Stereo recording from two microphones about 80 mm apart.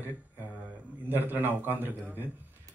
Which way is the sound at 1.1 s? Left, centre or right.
Right.